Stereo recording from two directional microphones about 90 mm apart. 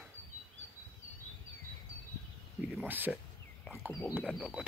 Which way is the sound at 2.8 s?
20° right (ahead or behind).